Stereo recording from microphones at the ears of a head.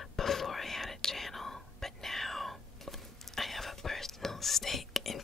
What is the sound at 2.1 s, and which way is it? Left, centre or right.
Whispering, centre.